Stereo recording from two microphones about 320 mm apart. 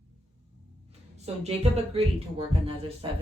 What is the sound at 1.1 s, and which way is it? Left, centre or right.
Speech, centre.